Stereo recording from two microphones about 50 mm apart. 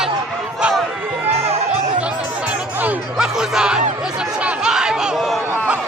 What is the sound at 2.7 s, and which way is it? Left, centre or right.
Chatter, right.